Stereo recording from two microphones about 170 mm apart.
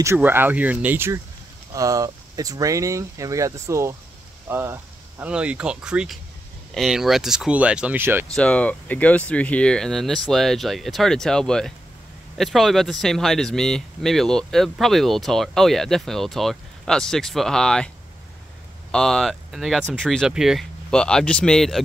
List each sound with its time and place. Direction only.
0.0 s speech: 15° right (ahead or behind)
8.4 s speech: 5° left (ahead or behind)